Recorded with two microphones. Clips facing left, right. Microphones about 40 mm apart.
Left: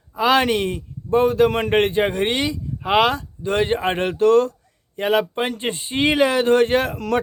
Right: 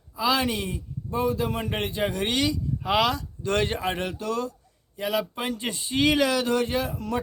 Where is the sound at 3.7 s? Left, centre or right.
Left.